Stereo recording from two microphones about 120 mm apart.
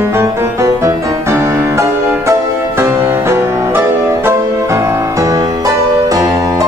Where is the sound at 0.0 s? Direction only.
20° right (ahead or behind).